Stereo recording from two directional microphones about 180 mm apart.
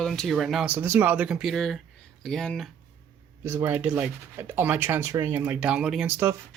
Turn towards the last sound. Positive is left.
turn(degrees=-10)  # may be behind; listen again after turning